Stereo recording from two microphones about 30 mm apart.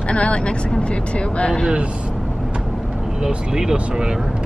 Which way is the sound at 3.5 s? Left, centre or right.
Right.